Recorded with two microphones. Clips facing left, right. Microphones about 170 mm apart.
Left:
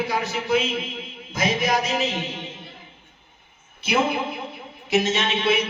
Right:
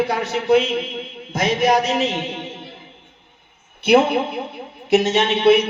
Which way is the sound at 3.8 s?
65° right (ahead or behind).